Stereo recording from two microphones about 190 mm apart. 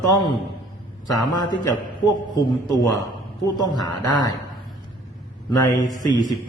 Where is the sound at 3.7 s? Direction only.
20° left (ahead or behind).